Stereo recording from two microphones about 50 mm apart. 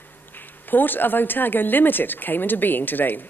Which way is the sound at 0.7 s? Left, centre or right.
Left.